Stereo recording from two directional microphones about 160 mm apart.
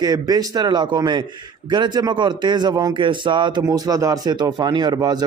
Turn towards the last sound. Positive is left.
turn(degrees=-25)  # may be behind; listen again after turning